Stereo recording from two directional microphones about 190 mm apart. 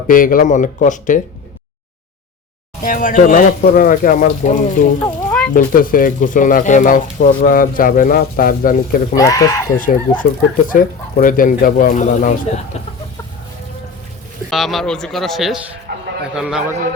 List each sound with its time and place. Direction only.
0.1 s speech: 45° left (ahead or behind)
2.8 s speech: 45° left (ahead or behind)
9.1 s speech: 15° left (ahead or behind)
9.7 s speech: 45° left (ahead or behind)
14.5 s a man's voice: centre (ahead or behind)
15.9 s a sound: 55° right (ahead or behind)
16.3 s a man's voice: 5° right (ahead or behind)